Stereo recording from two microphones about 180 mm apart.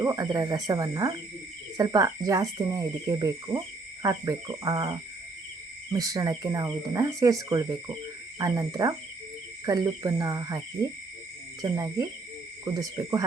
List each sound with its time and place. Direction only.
0.0 s speech: 20° right (ahead or behind)
11.6 s speech: 20° right (ahead or behind)